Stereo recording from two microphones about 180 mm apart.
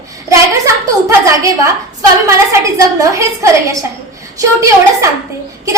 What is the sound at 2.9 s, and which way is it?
A woman's voice, 15° right (ahead or behind).